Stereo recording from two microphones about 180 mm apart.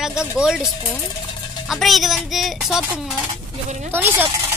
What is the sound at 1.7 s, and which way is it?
Speech, centre (ahead or behind).